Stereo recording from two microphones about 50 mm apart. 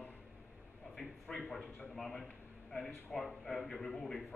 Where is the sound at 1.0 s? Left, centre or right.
Centre.